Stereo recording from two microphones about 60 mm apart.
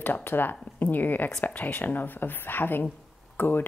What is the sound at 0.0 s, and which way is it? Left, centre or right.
A woman's voice, left.